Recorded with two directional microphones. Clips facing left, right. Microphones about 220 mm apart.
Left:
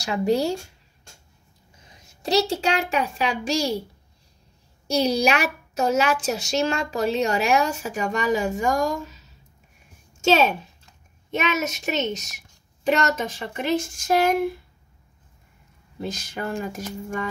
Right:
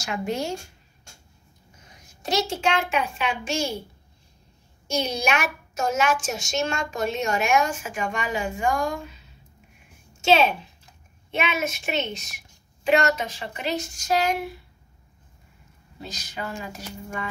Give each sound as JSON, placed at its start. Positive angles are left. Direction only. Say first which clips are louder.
{"t": 0.0, "sound": "a woman's voice", "louder": "left 6 dB", "side_deg": 35}
{"t": 2.2, "sound": "a woman's voice", "louder": "left 3 dB", "side_deg": 35}
{"t": 4.8, "sound": "a woman's voice", "louder": "left 5 dB", "side_deg": 35}
{"t": 16.0, "sound": "speech", "louder": "left 5 dB", "side_deg": 50}